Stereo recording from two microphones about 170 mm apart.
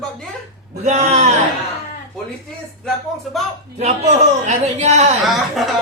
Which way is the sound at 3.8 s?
40° right (ahead or behind).